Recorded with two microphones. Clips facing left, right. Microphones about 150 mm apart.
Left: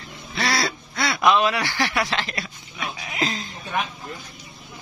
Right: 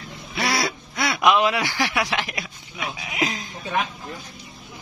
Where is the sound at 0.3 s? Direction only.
15° right (ahead or behind).